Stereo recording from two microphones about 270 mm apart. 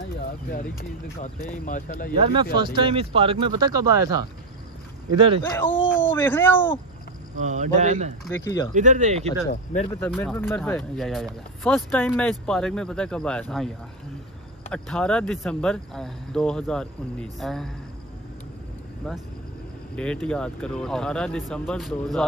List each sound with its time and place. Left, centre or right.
1.2 s speech: left
2.1 s speech: right
5.4 s speech: centre
7.4 s speech: right
8.3 s speech: centre
8.7 s speech: right
9.5 s speech: left
9.9 s speech: centre
14.7 s speech: centre
19.1 s speech: centre